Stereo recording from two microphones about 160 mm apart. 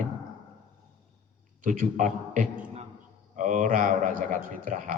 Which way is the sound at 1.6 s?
50° right (ahead or behind).